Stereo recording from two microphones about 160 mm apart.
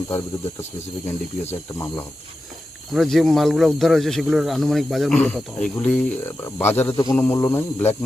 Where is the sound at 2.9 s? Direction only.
Centre (ahead or behind).